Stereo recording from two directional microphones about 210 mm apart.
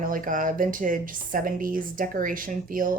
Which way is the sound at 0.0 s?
40° right (ahead or behind).